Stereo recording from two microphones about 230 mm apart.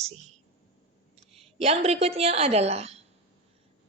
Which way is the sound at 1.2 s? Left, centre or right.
Right.